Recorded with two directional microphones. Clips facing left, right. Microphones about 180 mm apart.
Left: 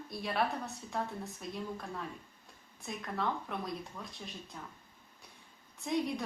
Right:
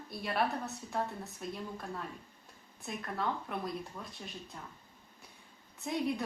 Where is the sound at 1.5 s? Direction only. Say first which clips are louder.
Left 2 dB; centre (ahead or behind).